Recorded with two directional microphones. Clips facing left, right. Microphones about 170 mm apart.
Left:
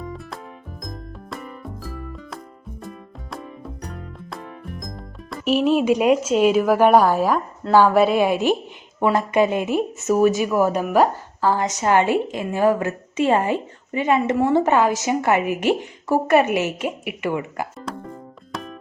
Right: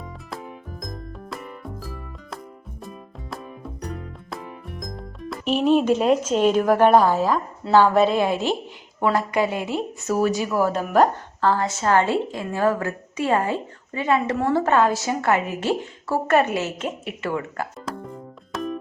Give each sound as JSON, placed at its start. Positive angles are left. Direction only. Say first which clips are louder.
{"t": 0.8, "sound": "music", "louder": "left 1 dB", "side_deg": 0}
{"t": 7.7, "sound": "a woman's voice", "louder": "left 1 dB", "side_deg": 10}